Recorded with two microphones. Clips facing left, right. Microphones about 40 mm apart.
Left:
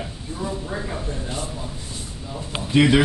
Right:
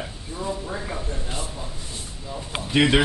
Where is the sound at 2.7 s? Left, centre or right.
Centre.